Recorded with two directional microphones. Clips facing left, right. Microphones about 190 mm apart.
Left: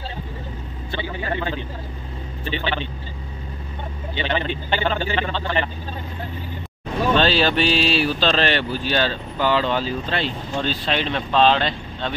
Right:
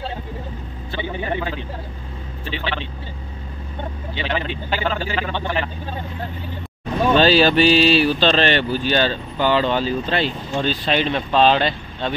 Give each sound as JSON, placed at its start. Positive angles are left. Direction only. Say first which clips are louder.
{"t": 1.0, "sound": "speech", "louder": "right 3 dB", "side_deg": -20}
{"t": 2.4, "sound": "speech", "louder": "left 2 dB", "side_deg": 0}
{"t": 4.1, "sound": "speech", "louder": "left 2 dB", "side_deg": 0}
{"t": 7.2, "sound": "speech", "louder": "right 5 dB", "side_deg": -5}